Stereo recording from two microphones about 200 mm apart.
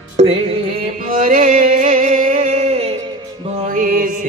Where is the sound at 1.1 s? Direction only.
40° right (ahead or behind).